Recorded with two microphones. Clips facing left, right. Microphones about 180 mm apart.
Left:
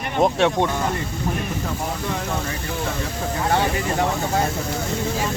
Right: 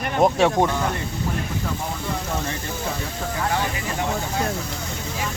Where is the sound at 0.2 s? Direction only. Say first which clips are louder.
Right 1 dB; centre (ahead or behind).